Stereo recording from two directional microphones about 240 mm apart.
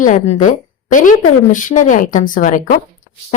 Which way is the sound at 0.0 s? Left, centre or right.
Left.